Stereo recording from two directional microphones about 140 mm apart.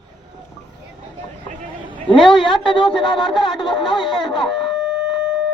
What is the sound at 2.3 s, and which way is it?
A woman's voice, 35° left (ahead or behind).